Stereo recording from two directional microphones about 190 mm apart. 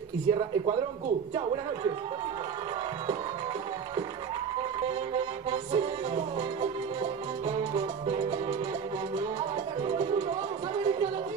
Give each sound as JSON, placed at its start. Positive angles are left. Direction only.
{"t": 0.3, "sound": "speech", "side_deg": -25}